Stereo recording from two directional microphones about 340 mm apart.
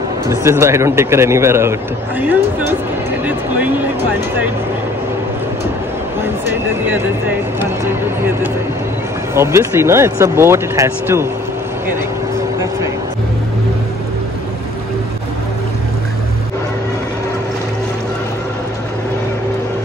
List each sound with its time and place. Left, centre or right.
0.3 s a man's voice: centre
6.4 s a man's voice: centre